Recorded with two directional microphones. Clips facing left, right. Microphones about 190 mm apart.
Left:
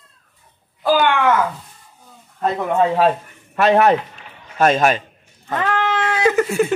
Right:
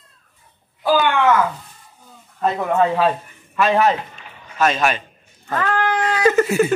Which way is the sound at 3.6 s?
60° left (ahead or behind).